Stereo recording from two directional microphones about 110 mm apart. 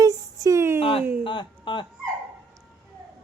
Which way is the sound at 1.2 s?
45° left (ahead or behind).